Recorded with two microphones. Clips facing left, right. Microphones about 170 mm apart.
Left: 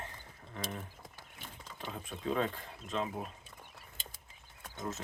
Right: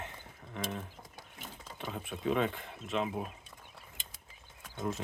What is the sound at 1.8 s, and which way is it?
Speech, 5° right (ahead or behind).